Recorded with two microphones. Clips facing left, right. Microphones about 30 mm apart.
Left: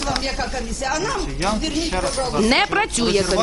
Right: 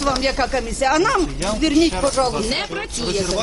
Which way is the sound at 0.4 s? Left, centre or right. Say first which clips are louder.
Right 6 dB; right.